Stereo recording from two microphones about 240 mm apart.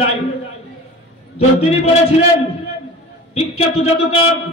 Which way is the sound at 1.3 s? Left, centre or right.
Left.